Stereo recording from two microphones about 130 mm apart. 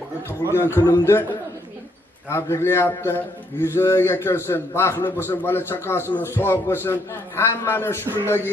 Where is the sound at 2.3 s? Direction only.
20° left (ahead or behind).